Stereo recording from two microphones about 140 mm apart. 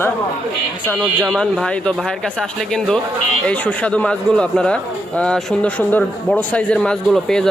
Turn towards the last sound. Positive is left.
turn(degrees=5)  # may be behind; listen again after turning